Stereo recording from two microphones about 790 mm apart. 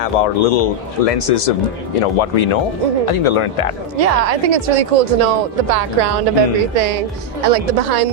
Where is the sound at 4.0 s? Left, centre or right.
Right.